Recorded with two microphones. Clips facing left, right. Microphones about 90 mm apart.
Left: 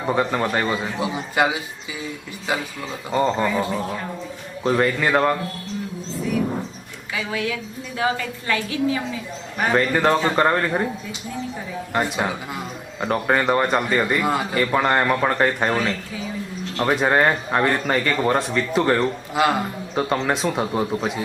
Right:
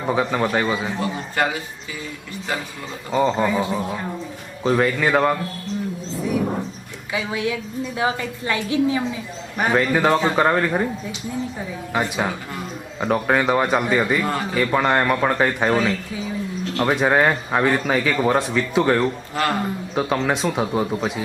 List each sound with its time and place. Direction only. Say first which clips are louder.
0.0 s a man's voice: even; centre (ahead or behind)
0.9 s a man's voice: left 1 dB; 10° left (ahead or behind)
3.1 s a man's voice: right 1 dB; centre (ahead or behind)
4.6 s a man's voice: right 1 dB; centre (ahead or behind)
7.1 s a woman's voice: right 2 dB; 20° right (ahead or behind)
9.7 s a man's voice: even; centre (ahead or behind)
11.9 s a man's voice: even; centre (ahead or behind)
19.3 s a man's voice: left 2 dB; 10° left (ahead or behind)
20.0 s a man's voice: even; centre (ahead or behind)